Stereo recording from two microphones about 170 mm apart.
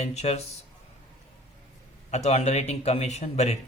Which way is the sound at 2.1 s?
40° left (ahead or behind).